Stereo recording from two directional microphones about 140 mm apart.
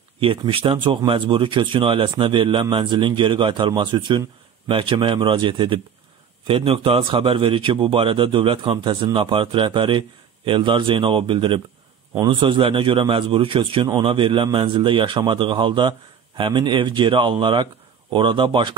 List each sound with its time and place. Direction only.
0.2 s a man's voice: 40° right (ahead or behind)